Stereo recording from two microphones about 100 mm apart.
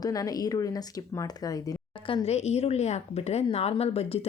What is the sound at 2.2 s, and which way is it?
A woman's voice, 90° left.